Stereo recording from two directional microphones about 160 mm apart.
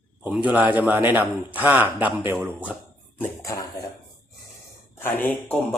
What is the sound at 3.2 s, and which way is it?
Speech, 20° left (ahead or behind).